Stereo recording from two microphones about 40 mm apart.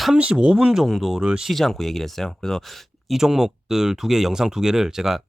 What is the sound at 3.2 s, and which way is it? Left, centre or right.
Speech, centre.